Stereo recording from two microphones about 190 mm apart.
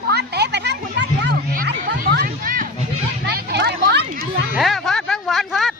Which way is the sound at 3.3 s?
60° right (ahead or behind).